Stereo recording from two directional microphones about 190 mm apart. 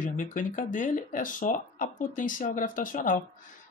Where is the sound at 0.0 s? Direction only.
45° left (ahead or behind).